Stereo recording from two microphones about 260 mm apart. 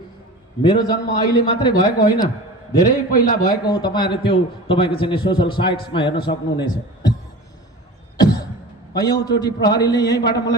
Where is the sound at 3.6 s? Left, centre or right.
Centre.